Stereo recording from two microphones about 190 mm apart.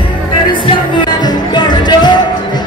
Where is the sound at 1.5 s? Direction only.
25° left (ahead or behind).